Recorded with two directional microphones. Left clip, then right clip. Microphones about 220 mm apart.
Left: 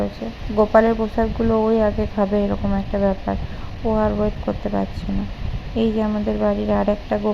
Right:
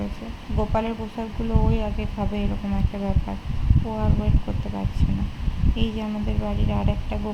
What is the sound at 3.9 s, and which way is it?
Speech, 20° left (ahead or behind).